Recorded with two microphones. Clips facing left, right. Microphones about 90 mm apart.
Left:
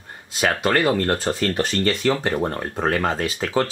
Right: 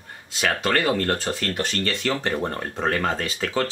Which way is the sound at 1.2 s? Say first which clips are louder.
Left 4 dB; 25° left (ahead or behind).